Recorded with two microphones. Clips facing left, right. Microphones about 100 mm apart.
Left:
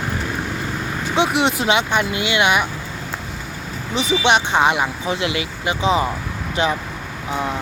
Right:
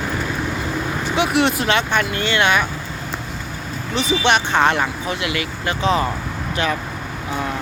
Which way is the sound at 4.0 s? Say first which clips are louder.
Left 1 dB; 20° left (ahead or behind).